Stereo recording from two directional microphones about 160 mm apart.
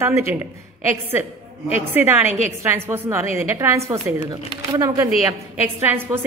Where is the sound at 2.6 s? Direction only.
15° right (ahead or behind).